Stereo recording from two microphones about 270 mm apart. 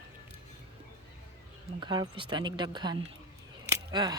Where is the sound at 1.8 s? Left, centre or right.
Centre.